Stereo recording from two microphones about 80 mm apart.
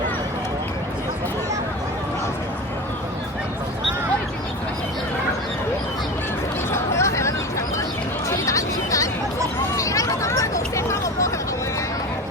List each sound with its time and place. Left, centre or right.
6.7 s chatter: left
8.3 s music: left
9.7 s hubbub: left